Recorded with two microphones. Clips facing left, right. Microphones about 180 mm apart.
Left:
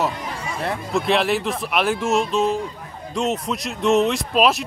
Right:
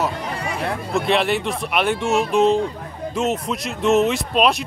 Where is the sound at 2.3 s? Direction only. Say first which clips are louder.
Right 4 dB; 20° right (ahead or behind).